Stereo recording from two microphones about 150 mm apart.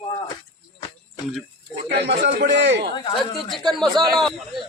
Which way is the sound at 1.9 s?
90° right.